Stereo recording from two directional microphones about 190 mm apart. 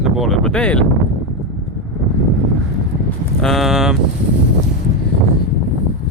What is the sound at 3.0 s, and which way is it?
Livestock, centre (ahead or behind).